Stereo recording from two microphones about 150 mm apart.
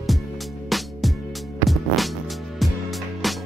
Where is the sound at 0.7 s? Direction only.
Centre (ahead or behind).